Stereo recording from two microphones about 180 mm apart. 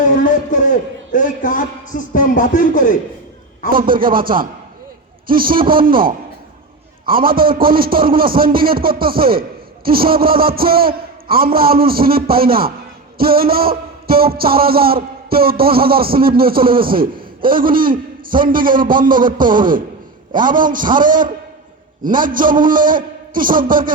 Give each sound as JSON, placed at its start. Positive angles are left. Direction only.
{"t": 0.2, "sound": "a man's voice", "side_deg": 45}
{"t": 3.7, "sound": "a man's voice", "side_deg": -50}